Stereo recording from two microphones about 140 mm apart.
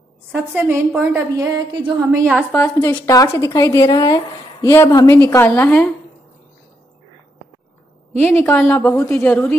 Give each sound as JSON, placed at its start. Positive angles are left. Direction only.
{"t": 0.3, "sound": "a woman's voice", "side_deg": -15}
{"t": 2.5, "sound": "a woman's voice", "side_deg": 15}
{"t": 8.2, "sound": "a woman's voice", "side_deg": 15}